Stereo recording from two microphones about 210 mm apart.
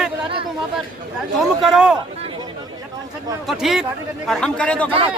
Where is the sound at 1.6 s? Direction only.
Centre (ahead or behind).